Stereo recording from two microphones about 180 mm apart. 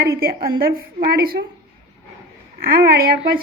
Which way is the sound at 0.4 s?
55° right (ahead or behind).